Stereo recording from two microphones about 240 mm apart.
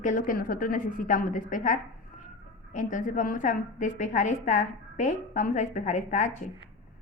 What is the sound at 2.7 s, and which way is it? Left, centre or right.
A woman's voice, left.